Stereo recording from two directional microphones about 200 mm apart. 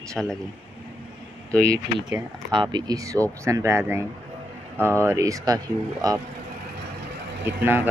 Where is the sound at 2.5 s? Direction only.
20° right (ahead or behind).